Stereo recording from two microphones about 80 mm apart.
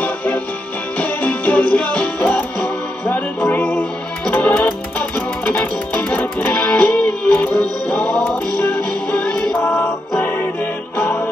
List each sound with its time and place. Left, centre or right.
0.0 s music: centre
9.6 s music: left